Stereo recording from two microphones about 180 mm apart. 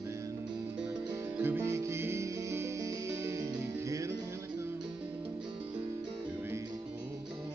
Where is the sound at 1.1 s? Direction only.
10° right (ahead or behind).